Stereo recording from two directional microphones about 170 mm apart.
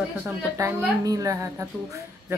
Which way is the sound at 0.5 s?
20° right (ahead or behind).